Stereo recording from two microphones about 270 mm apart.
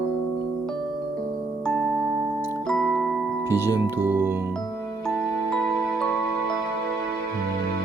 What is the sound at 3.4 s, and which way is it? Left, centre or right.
Speech, centre.